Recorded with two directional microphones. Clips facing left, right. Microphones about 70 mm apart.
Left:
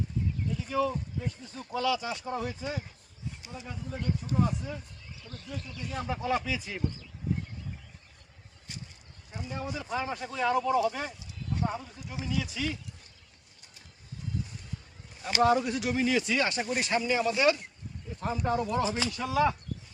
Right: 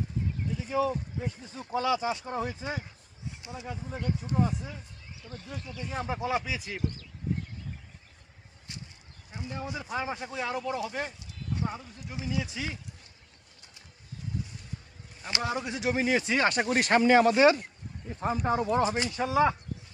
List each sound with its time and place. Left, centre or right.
0.7 s speech: centre
3.6 s speech: centre
6.1 s speech: centre
9.5 s speech: centre
9.8 s speech: centre
12.4 s speech: right
15.2 s speech: centre
15.6 s speech: right
16.5 s speech: right
17.3 s speech: right